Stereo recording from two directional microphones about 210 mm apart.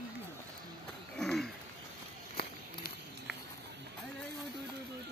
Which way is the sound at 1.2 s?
Centre (ahead or behind).